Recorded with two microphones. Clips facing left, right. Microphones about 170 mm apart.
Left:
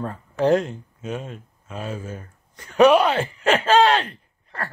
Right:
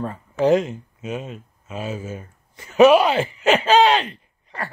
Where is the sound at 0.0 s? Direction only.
Centre (ahead or behind).